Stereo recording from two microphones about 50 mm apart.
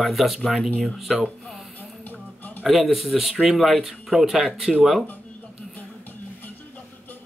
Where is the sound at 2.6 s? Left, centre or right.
Centre.